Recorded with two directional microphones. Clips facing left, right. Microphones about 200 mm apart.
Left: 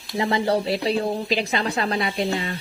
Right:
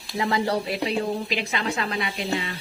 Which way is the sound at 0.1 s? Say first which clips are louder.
Left 3 dB; 25° left (ahead or behind).